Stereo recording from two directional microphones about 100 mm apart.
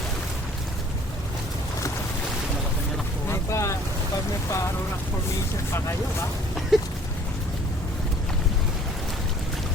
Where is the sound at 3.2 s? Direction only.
30° left (ahead or behind).